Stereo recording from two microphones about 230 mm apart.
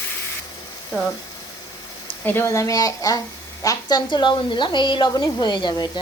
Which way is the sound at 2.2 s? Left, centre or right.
Centre.